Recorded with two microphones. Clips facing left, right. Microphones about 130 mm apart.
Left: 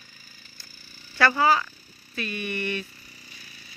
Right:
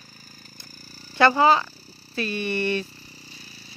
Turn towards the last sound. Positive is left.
turn(degrees=-30)  # may be behind; listen again after turning